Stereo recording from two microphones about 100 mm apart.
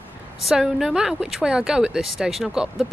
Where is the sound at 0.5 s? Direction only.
5° right (ahead or behind).